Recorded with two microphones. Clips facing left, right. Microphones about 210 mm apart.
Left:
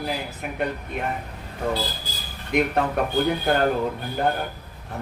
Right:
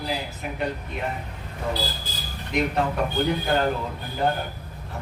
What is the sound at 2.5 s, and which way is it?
A man's voice, 55° left (ahead or behind).